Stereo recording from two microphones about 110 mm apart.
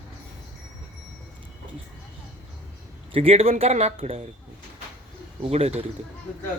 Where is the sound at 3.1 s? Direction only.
60° right (ahead or behind).